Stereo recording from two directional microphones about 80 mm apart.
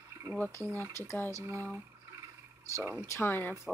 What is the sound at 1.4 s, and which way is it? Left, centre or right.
Speech, right.